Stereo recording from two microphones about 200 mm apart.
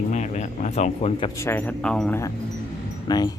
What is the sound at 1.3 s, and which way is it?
Speech, 10° left (ahead or behind).